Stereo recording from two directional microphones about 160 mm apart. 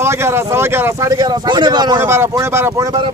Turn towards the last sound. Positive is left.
turn(degrees=-25)  # may be behind; listen again after turning